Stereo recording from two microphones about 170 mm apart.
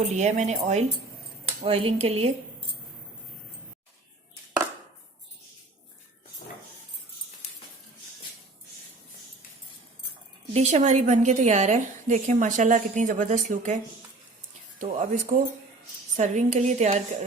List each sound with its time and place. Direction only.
0.1 s a woman's voice: 45° right (ahead or behind)
10.5 s a woman's voice: 40° right (ahead or behind)
14.8 s a woman's voice: 45° right (ahead or behind)